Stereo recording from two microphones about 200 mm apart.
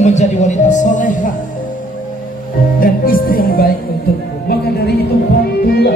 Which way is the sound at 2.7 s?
45° left (ahead or behind).